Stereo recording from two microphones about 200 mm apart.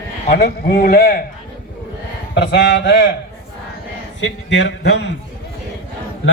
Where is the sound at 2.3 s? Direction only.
60° left (ahead or behind).